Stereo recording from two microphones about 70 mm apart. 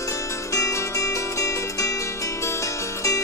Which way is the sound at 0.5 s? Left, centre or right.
Left.